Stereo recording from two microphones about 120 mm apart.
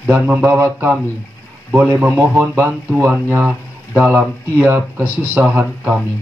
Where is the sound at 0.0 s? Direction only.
10° right (ahead or behind).